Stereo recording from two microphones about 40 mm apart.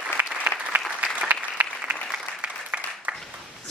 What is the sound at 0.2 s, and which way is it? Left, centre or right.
Applause, right.